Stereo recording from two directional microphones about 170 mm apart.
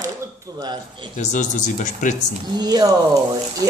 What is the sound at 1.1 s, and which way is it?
Speech, 45° left (ahead or behind).